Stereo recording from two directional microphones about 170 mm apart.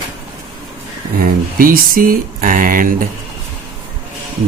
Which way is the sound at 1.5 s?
55° right (ahead or behind).